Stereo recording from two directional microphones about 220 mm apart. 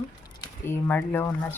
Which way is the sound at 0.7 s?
10° left (ahead or behind).